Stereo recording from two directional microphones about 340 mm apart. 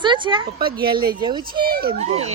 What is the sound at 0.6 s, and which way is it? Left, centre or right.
A child's voice, right.